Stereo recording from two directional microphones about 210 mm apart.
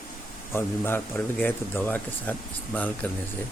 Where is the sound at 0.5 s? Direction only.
10° left (ahead or behind).